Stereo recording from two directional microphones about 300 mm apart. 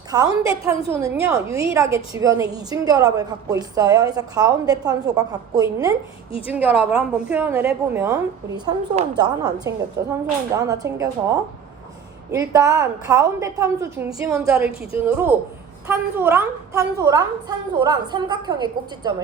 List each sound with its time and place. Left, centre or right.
0.1 s a woman's voice: centre
0.7 s a woman's voice: centre
1.2 s a woman's voice: centre